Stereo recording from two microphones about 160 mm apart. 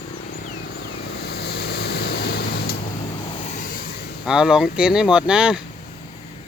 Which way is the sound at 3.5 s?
55° left (ahead or behind).